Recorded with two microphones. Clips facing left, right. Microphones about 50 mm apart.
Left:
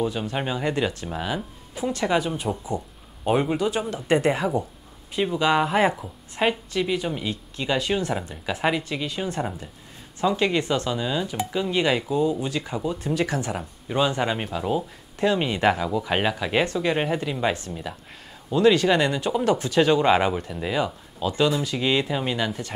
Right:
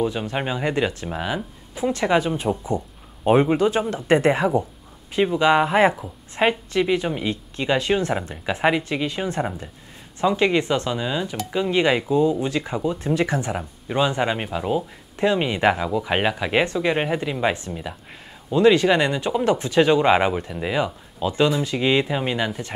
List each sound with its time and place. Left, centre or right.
0.4 s speech: centre
2.1 s speech: right
3.5 s speech: right
5.2 s a woman's voice: centre
8.5 s speech: centre
18.6 s speech: right